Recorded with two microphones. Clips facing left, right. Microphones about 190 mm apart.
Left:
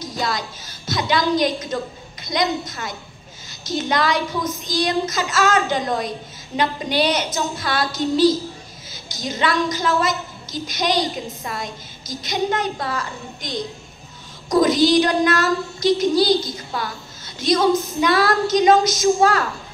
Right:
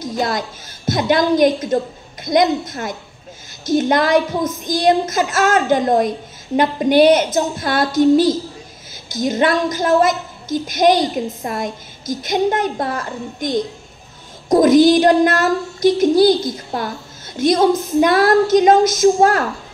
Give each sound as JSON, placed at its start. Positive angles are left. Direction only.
{"t": 0.0, "sound": "a woman's voice", "side_deg": -50}